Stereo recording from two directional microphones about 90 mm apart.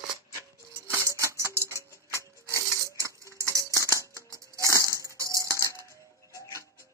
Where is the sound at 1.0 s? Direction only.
35° right (ahead or behind).